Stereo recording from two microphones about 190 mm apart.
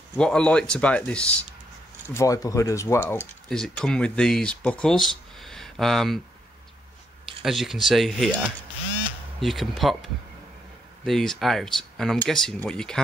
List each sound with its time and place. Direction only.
0.2 s speech: 5° left (ahead or behind)
3.4 s speech: centre (ahead or behind)
7.4 s speech: centre (ahead or behind)
11.1 s speech: centre (ahead or behind)